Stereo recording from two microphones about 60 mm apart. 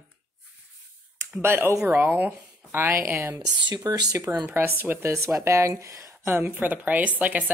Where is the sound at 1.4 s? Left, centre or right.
Right.